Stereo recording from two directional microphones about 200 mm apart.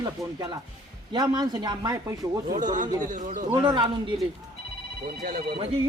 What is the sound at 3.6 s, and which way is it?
Speech, 20° right (ahead or behind).